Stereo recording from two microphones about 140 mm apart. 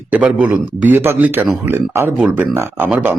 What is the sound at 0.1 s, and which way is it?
Speech, 10° right (ahead or behind).